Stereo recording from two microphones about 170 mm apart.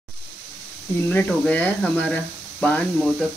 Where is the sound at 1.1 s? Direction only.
5° left (ahead or behind).